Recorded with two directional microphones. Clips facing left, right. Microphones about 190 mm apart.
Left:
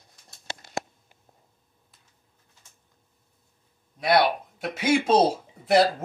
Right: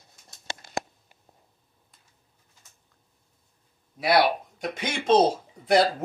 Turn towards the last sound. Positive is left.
turn(degrees=5)  # may be behind; listen again after turning